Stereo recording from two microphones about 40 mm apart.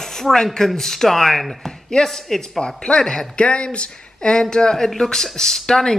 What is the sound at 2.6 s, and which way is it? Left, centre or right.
Speech, left.